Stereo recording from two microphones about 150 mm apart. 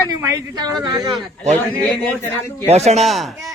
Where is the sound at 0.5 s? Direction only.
25° right (ahead or behind).